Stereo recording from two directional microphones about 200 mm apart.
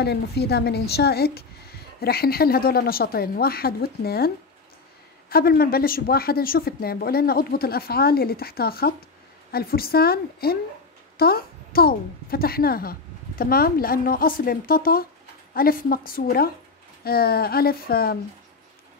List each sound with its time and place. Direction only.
0.0 s speech: 55° left (ahead or behind)
5.3 s speech: 50° left (ahead or behind)